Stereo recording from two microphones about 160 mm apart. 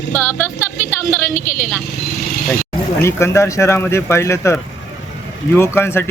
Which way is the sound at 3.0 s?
15° left (ahead or behind).